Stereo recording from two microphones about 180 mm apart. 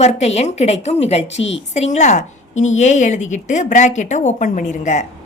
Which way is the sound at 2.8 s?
40° left (ahead or behind).